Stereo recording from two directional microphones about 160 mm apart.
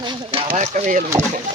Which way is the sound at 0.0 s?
35° right (ahead or behind).